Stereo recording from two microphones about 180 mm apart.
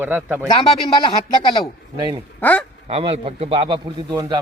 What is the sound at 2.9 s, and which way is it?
Speech, 30° right (ahead or behind).